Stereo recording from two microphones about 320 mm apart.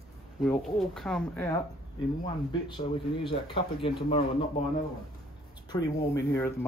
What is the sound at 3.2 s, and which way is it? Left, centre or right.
Speech, centre.